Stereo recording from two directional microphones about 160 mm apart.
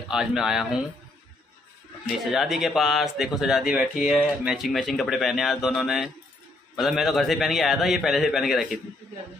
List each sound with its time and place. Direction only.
0.1 s speech: 5° right (ahead or behind)
2.2 s speech: centre (ahead or behind)